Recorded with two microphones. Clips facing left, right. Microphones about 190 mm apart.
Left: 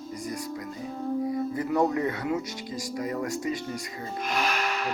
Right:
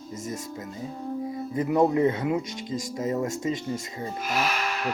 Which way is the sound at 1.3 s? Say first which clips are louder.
Right 1 dB; 20° right (ahead or behind).